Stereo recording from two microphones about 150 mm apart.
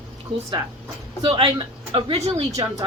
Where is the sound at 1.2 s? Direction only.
40° right (ahead or behind).